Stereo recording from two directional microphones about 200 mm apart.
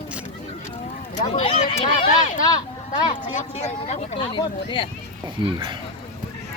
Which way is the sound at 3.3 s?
35° left (ahead or behind).